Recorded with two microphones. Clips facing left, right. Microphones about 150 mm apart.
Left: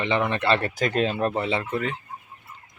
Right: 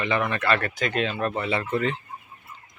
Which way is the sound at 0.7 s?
40° left (ahead or behind).